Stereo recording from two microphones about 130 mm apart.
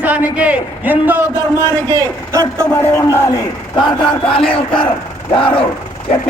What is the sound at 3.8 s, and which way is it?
A man's voice, 40° left (ahead or behind).